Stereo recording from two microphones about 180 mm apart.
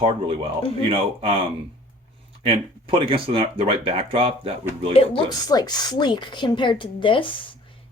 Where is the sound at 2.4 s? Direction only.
30° right (ahead or behind).